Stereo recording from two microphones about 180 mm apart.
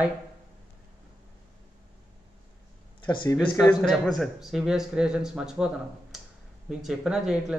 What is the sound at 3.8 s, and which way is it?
Speech, centre (ahead or behind).